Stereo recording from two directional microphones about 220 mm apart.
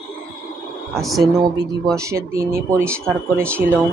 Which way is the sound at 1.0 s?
Centre (ahead or behind).